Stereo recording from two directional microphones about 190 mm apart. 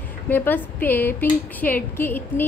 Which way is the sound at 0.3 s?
10° left (ahead or behind).